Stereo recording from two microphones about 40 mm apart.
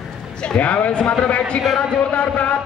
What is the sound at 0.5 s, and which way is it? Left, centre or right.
Speech, left.